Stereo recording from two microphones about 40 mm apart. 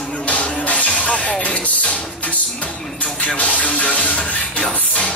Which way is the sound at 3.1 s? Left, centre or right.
Left.